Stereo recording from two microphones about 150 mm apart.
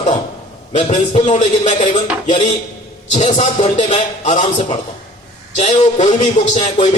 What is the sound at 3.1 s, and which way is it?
Speech, 50° left (ahead or behind).